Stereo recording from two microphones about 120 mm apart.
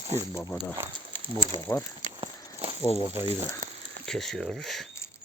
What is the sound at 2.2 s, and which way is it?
Walk, 55° right (ahead or behind).